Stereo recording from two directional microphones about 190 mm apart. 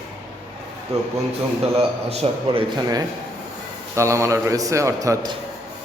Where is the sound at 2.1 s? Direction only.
35° right (ahead or behind).